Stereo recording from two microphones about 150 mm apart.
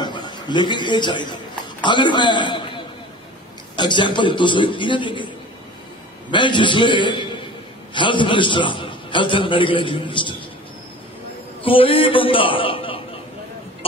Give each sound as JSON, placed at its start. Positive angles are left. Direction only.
{"t": 0.0, "sound": "a man's voice", "side_deg": 30}
{"t": 6.3, "sound": "a man's voice", "side_deg": 30}
{"t": 11.6, "sound": "a man's voice", "side_deg": 35}